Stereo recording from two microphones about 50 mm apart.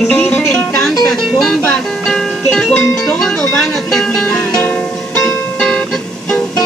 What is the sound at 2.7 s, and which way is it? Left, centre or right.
Speech, centre.